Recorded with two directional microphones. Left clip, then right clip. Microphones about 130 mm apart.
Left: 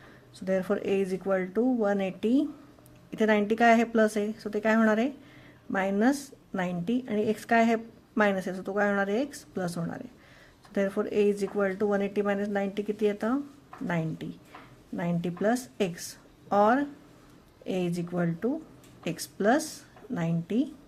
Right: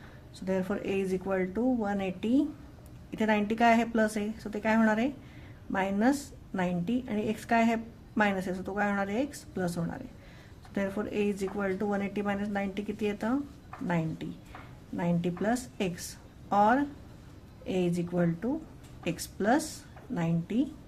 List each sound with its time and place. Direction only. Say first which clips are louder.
0.3 s a woman's voice: left 4 dB; 30° left (ahead or behind)